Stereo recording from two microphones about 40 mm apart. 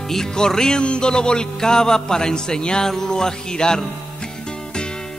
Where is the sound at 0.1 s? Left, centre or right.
Centre.